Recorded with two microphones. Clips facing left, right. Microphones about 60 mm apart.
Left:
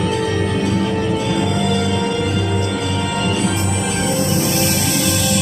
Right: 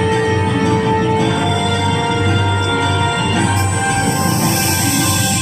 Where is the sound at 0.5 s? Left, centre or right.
Right.